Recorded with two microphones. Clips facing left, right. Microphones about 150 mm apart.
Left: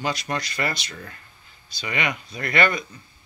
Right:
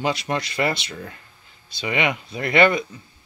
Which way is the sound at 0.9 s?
15° right (ahead or behind).